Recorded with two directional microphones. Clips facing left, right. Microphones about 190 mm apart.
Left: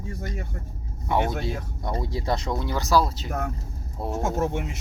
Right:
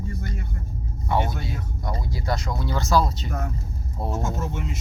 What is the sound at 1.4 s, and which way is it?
Speech, 25° left (ahead or behind).